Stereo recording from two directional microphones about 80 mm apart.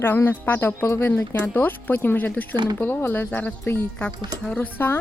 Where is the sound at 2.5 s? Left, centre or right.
Right.